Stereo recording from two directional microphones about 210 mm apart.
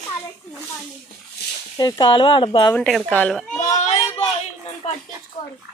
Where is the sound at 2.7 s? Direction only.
5° left (ahead or behind).